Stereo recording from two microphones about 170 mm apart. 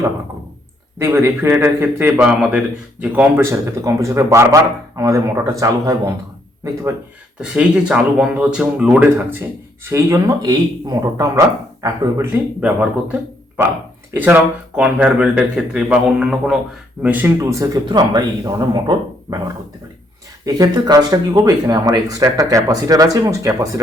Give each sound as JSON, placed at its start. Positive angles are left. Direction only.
{"t": 0.9, "sound": "a man's voice", "side_deg": -15}
{"t": 7.3, "sound": "a man's voice", "side_deg": -5}
{"t": 20.4, "sound": "speech", "side_deg": -25}